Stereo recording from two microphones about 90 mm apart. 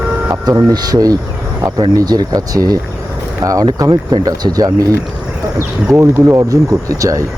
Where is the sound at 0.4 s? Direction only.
50° right (ahead or behind).